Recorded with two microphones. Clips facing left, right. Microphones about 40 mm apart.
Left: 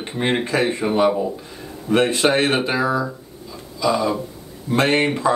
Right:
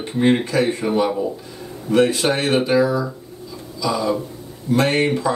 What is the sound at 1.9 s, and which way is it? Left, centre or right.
Speech, left.